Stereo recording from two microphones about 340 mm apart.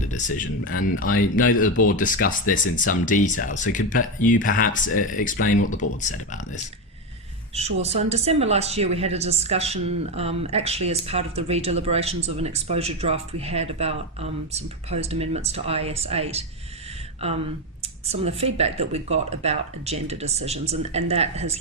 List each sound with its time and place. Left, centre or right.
0.0 s speech: left
7.5 s speech: centre